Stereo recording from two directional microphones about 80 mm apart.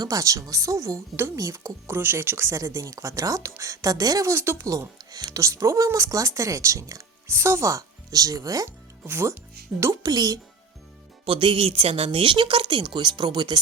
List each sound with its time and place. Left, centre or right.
0.0 s a woman's voice: right
4.7 s speech: right
9.0 s speech: right
9.8 s a woman's voice: right
11.3 s a woman's voice: right